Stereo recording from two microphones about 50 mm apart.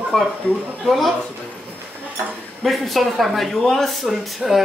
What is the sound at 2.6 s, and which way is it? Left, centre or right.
Speech, centre.